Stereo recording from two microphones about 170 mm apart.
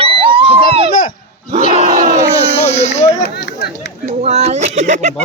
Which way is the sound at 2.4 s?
35° left (ahead or behind).